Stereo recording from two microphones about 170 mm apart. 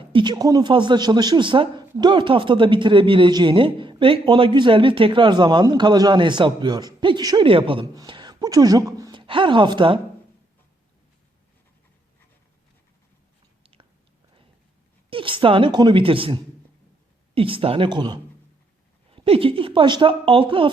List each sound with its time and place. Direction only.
0.1 s speech: 25° right (ahead or behind)
15.1 s a woman's voice: 30° right (ahead or behind)